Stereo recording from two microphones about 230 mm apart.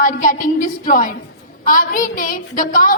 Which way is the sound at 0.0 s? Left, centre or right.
Left.